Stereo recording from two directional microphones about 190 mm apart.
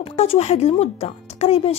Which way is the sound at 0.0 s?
30° left (ahead or behind).